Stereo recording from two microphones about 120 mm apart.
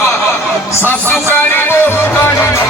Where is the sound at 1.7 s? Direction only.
20° left (ahead or behind).